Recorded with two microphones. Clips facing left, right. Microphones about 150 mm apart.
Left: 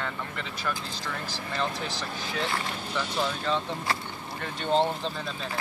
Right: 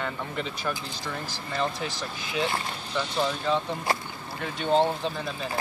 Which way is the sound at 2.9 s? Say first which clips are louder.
Right 3 dB; 10° right (ahead or behind).